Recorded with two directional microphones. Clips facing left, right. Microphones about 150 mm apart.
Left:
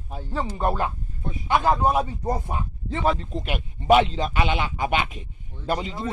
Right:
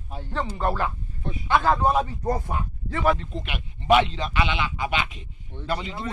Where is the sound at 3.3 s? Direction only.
40° left (ahead or behind).